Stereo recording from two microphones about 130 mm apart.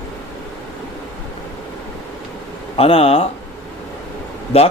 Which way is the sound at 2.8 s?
45° left (ahead or behind).